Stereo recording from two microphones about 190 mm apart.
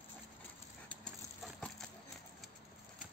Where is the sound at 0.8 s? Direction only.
5° left (ahead or behind).